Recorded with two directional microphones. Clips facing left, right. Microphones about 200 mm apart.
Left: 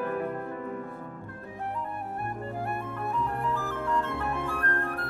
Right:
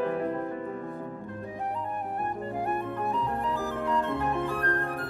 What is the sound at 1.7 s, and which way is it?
Music, 20° right (ahead or behind).